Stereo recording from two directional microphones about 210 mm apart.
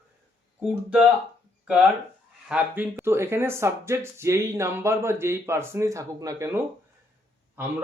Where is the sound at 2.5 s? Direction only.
5° right (ahead or behind).